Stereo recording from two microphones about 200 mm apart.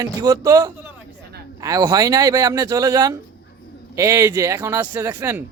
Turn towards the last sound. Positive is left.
turn(degrees=-15)  # may be behind; listen again after turning